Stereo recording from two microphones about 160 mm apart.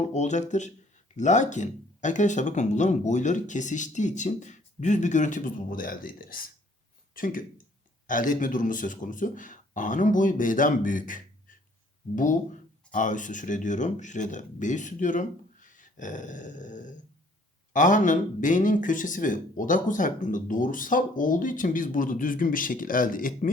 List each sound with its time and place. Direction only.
0.0 s speech: 45° left (ahead or behind)